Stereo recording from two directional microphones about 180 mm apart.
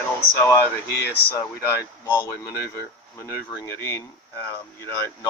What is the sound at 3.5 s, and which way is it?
Speech, 15° left (ahead or behind).